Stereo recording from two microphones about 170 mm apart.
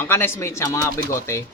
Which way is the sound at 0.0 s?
15° left (ahead or behind).